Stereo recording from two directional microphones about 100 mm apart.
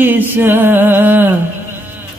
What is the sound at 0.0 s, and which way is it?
Mantra, 20° right (ahead or behind).